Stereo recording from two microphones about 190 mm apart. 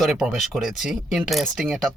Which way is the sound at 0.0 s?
Centre (ahead or behind).